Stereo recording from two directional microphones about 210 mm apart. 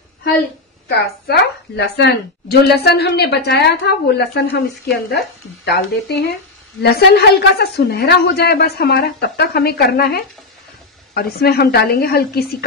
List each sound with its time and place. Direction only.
0.8 s a woman's voice: 50° left (ahead or behind)